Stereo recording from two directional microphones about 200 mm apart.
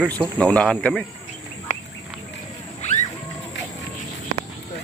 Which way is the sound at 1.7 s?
35° left (ahead or behind).